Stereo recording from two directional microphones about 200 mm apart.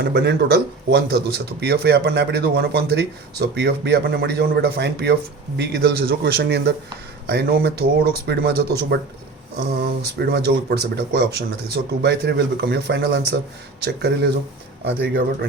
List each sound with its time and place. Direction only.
0.0 s speech: 55° right (ahead or behind)
10.0 s speech: 55° right (ahead or behind)